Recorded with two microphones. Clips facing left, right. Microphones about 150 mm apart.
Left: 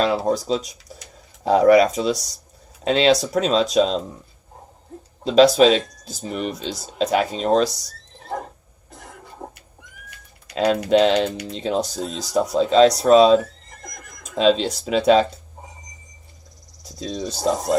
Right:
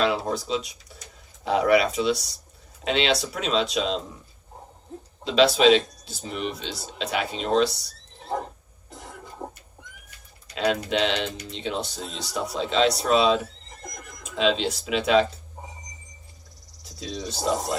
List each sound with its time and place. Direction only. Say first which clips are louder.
0.0 s speech: left 4 dB; 40° left (ahead or behind)
5.2 s speech: left 5 dB; 40° left (ahead or behind)
9.4 s neigh: even; 5° right (ahead or behind)
10.5 s speech: left 7 dB; 35° left (ahead or behind)
16.8 s speech: left 5 dB; 40° left (ahead or behind)